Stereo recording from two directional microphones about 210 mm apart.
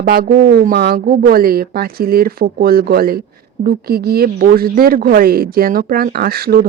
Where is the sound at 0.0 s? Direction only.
45° right (ahead or behind).